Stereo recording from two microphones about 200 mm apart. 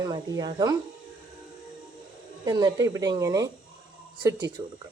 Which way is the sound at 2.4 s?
20° right (ahead or behind).